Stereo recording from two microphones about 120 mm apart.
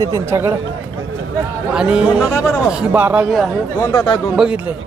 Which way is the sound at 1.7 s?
5° right (ahead or behind).